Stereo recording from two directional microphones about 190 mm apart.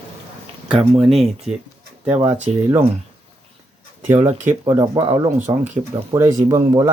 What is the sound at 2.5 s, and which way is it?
Speech, 35° right (ahead or behind).